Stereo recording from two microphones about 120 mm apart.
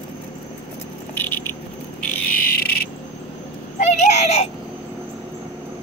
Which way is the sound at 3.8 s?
70° left (ahead or behind).